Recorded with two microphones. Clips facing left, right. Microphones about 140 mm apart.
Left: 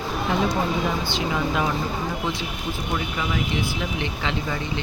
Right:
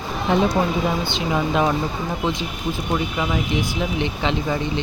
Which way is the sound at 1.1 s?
20° right (ahead or behind).